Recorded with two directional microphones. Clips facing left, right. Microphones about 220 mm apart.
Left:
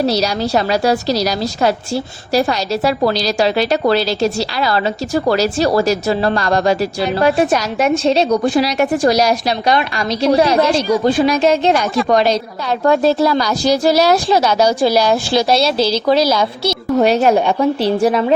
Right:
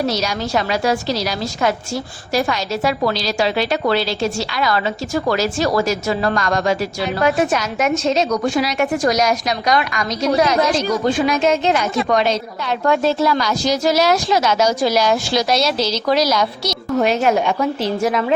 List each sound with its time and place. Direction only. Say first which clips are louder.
0.0 s a woman's voice: left 4 dB; 35° left (ahead or behind)